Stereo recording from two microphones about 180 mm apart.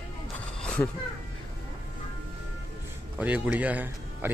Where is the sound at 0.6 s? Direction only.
10° left (ahead or behind).